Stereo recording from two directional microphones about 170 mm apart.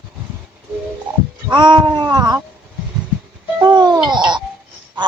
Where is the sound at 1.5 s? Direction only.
25° right (ahead or behind).